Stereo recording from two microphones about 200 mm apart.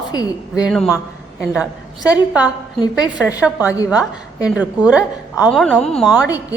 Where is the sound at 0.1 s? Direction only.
20° left (ahead or behind).